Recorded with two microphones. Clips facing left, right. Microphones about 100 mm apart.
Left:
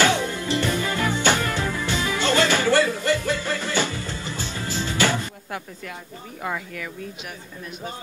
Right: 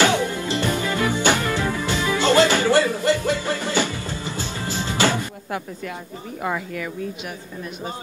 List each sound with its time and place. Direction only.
0.0 s music: 20° right (ahead or behind)
6.4 s speech: 35° right (ahead or behind)